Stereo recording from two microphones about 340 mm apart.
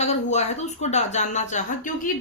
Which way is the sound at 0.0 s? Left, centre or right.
Centre.